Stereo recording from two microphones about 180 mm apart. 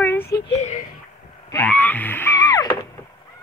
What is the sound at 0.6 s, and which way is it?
Speech, 40° left (ahead or behind).